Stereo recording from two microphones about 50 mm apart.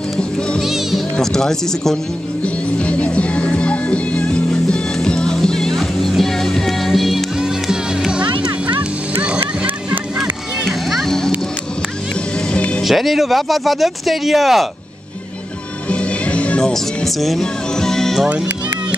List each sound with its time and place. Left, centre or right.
0.6 s music: centre
1.1 s speech: centre
2.4 s music: left; by 7.2 s centre
7.3 s music: centre
9.2 s a sound: right
10.6 s music: centre
11.1 s a sound: centre
12.5 s music: left
12.8 s speech: centre
15.9 s music: left
16.7 s speech: centre
17.4 s music: centre